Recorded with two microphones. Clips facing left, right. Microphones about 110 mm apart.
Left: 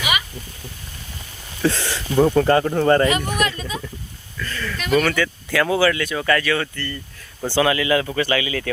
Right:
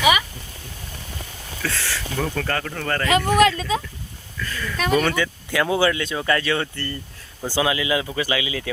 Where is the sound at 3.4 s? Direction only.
90° right.